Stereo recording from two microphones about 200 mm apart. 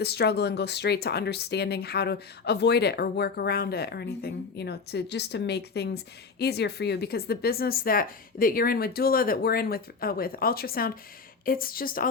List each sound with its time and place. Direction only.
0.0 s speech: 55° left (ahead or behind)